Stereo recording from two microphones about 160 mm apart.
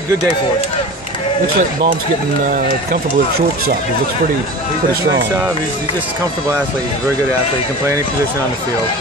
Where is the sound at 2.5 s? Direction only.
65° right (ahead or behind).